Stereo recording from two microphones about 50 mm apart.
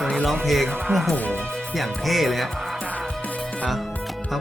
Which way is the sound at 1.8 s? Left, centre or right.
Centre.